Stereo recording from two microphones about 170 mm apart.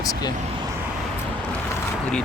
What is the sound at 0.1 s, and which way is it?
Vehicle, 25° left (ahead or behind).